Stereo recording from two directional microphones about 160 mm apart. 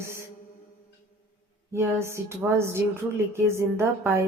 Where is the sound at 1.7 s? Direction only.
15° right (ahead or behind).